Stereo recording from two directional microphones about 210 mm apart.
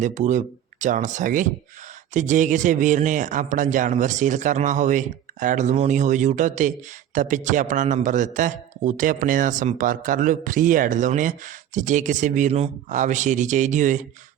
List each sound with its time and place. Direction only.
0.0 s a man's voice: 35° right (ahead or behind)